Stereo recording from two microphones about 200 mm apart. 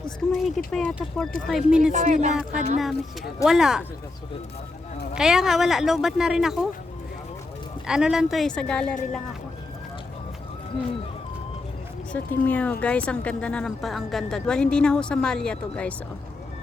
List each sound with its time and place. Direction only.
0.3 s a woman's voice: centre (ahead or behind)
1.9 s speech: 35° right (ahead or behind)
3.4 s a woman's voice: centre (ahead or behind)
5.1 s a woman's voice: centre (ahead or behind)
7.9 s a woman's voice: 5° right (ahead or behind)
12.1 s a woman's voice: 5° left (ahead or behind)